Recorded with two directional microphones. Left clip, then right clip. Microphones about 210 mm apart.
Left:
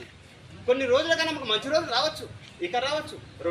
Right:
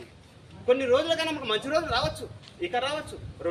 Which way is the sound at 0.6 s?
10° right (ahead or behind).